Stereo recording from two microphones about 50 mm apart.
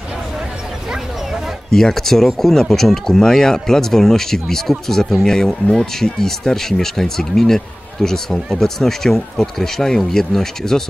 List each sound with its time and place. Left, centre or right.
1.7 s speech: centre